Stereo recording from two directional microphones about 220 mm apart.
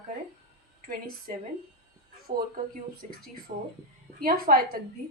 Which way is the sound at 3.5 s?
30° right (ahead or behind).